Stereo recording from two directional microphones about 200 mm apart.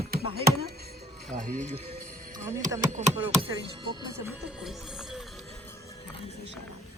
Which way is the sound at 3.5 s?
25° right (ahead or behind).